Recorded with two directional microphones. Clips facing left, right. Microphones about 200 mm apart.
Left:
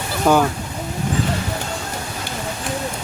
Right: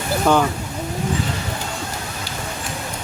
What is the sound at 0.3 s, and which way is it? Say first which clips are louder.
Speech: left 1 dB; 5° left (ahead or behind).